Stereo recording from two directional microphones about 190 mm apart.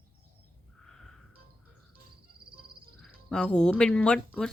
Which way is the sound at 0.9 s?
5° left (ahead or behind).